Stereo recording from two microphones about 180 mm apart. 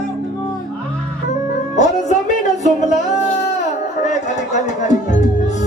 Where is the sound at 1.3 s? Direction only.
40° left (ahead or behind).